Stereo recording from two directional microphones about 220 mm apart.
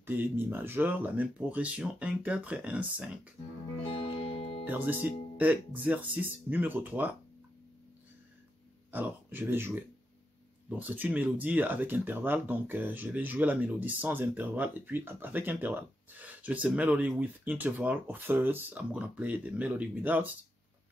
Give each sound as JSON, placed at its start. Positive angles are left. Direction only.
{"t": 0.0, "sound": "speech", "side_deg": -10}
{"t": 3.8, "sound": "music", "side_deg": 25}
{"t": 4.6, "sound": "speech", "side_deg": -10}
{"t": 8.9, "sound": "speech", "side_deg": -10}
{"t": 10.8, "sound": "speech", "side_deg": -10}